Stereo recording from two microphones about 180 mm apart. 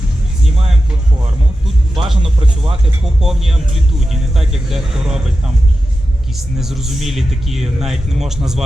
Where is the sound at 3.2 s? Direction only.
Centre (ahead or behind).